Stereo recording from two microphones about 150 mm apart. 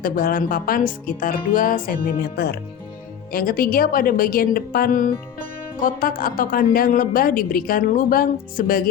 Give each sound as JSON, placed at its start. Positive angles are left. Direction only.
{"t": 0.0, "sound": "a woman's voice", "side_deg": 75}
{"t": 3.3, "sound": "a woman's voice", "side_deg": 75}